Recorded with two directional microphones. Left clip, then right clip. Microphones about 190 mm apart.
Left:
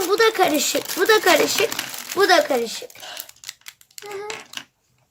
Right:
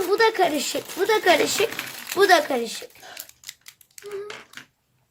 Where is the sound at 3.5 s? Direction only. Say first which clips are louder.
Left 4 dB; centre (ahead or behind).